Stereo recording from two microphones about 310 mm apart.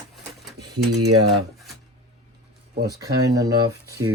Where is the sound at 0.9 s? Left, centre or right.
Right.